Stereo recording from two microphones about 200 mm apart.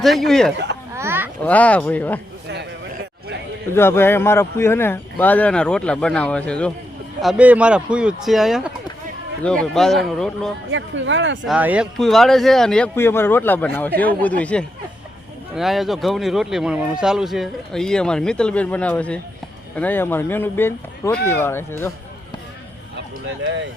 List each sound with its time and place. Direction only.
0.0 s speech: centre (ahead or behind)
0.9 s a sound: 10° right (ahead or behind)
1.5 s speech: 5° left (ahead or behind)
2.5 s a sound: 55° right (ahead or behind)
3.8 s speech: 10° left (ahead or behind)
9.7 s speech: centre (ahead or behind)
10.7 s speech: 70° right (ahead or behind)
11.4 s speech: 5° right (ahead or behind); by 21.9 s 10° left (ahead or behind)
23.0 s a sound: 65° right (ahead or behind)